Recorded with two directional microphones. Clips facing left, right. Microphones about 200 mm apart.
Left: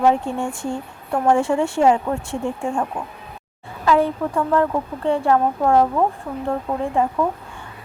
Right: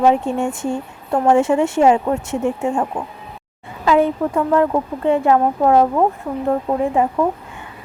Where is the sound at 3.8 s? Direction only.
20° right (ahead or behind).